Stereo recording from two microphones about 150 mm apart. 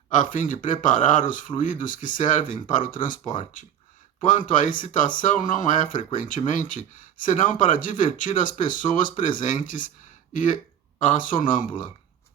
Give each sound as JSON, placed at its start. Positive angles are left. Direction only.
{"t": 0.1, "sound": "speech", "side_deg": 60}